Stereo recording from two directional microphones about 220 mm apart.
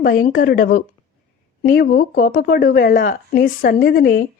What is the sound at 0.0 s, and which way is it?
Speech, 40° left (ahead or behind).